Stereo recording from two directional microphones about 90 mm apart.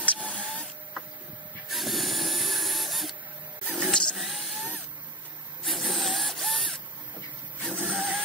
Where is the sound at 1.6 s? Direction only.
Centre (ahead or behind).